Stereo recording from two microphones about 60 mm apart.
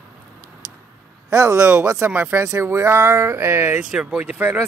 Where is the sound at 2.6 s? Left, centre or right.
Right.